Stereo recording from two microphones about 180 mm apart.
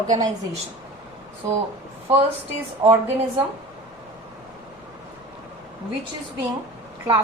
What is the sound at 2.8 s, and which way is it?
Speech, 25° right (ahead or behind).